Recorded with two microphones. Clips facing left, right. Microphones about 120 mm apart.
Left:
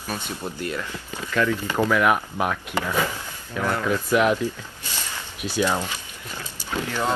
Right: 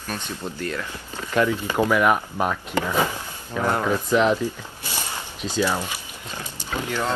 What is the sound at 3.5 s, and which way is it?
Speech, 20° right (ahead or behind).